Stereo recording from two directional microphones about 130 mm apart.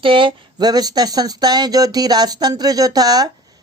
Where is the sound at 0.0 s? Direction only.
40° right (ahead or behind).